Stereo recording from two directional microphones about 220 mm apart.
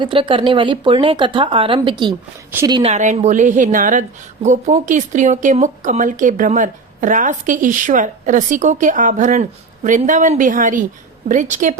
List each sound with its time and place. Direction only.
0.0 s speech: 20° right (ahead or behind)
2.9 s speech: 30° right (ahead or behind)